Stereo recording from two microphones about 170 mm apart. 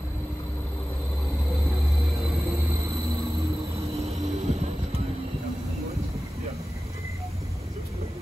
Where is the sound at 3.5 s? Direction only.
35° right (ahead or behind).